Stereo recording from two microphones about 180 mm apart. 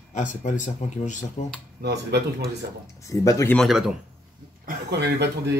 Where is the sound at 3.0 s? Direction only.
15° left (ahead or behind).